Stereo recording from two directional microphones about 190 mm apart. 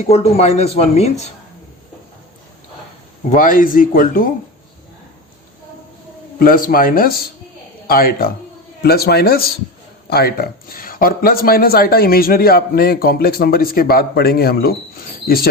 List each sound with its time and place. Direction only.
0.0 s speech: 35° left (ahead or behind)
3.2 s speech: 45° left (ahead or behind)
6.4 s a man's voice: 50° left (ahead or behind)